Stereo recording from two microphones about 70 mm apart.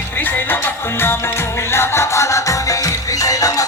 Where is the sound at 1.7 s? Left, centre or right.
Left.